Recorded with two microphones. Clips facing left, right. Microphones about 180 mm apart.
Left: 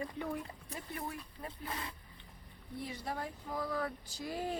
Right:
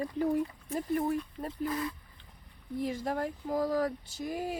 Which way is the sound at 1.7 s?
25° left (ahead or behind).